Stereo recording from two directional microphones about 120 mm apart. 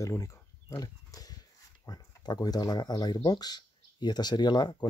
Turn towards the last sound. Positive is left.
turn(degrees=40)  # may be behind; listen again after turning